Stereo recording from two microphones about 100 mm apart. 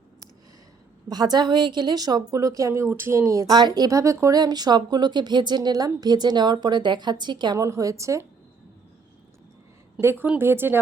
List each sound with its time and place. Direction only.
1.0 s a woman's voice: 45° right (ahead or behind)
7.6 s a woman's voice: 30° right (ahead or behind)
10.0 s speech: 25° right (ahead or behind)